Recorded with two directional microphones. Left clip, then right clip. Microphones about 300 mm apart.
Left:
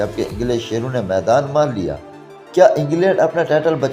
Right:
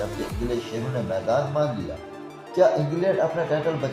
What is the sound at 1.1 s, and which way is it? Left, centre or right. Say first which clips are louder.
Speech: left 9 dB; left.